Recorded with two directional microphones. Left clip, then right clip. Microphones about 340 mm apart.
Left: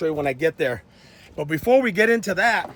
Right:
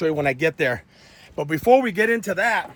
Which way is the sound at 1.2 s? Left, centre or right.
Centre.